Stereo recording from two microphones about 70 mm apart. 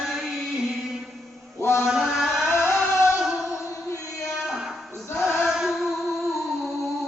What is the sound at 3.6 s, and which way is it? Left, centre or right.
Music, left.